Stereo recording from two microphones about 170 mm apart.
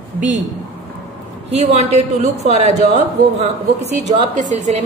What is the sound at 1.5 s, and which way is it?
A woman's voice, 40° right (ahead or behind).